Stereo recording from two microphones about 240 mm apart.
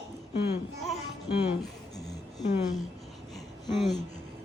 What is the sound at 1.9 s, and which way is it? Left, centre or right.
Music, centre.